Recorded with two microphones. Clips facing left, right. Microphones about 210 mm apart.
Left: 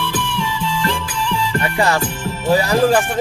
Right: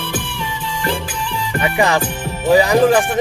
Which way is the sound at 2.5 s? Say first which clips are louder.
Right 3 dB; 20° right (ahead or behind).